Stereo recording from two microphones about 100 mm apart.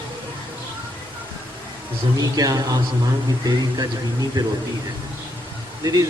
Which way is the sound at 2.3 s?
35° right (ahead or behind).